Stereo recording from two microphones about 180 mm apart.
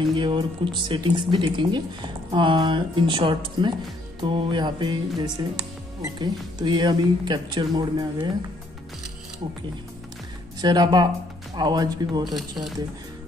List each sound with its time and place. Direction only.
0.1 s speech: 25° right (ahead or behind)
10.6 s speech: 25° right (ahead or behind)
12.4 s speech: centre (ahead or behind)